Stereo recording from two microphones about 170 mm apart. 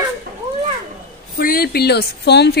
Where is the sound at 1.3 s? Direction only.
60° left (ahead or behind); by 2.5 s 75° left (ahead or behind).